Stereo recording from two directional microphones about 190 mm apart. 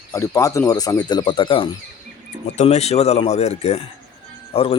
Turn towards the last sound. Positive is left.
turn(degrees=30)  # may be behind; listen again after turning